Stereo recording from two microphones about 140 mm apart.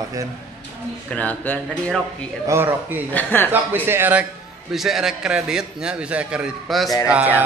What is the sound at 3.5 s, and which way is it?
Speech, 15° right (ahead or behind).